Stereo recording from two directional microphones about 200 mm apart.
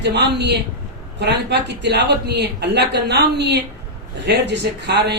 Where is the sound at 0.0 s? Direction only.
55° right (ahead or behind).